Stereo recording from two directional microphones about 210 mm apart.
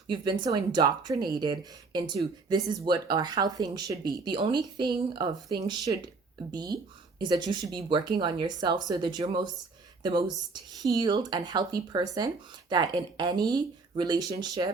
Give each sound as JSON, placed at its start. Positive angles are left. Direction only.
{"t": 0.1, "sound": "speech", "side_deg": -20}